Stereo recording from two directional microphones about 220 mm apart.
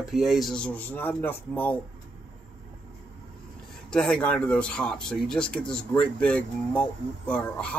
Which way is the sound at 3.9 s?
5° left (ahead or behind).